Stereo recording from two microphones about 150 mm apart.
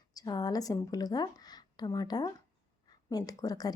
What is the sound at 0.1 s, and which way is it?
A woman's voice, 25° left (ahead or behind).